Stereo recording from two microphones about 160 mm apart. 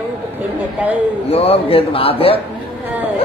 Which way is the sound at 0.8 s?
10° right (ahead or behind).